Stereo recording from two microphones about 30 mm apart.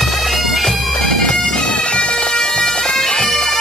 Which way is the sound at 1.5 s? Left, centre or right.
Left.